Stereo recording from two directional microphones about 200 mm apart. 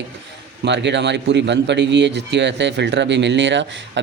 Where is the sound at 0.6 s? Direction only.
60° right (ahead or behind).